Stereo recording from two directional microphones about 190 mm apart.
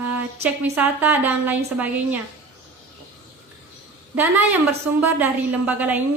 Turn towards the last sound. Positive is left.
turn(degrees=-10)  # may be behind; listen again after turning